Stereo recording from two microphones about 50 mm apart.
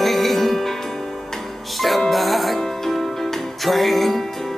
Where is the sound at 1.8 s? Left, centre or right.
Centre.